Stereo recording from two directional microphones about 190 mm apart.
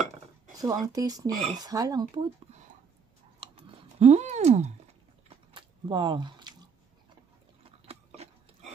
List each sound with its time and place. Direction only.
0.6 s speech: 20° right (ahead or behind)
3.3 s typing: 30° right (ahead or behind)
5.5 s chewing: 25° right (ahead or behind)
7.8 s a sound: 30° right (ahead or behind)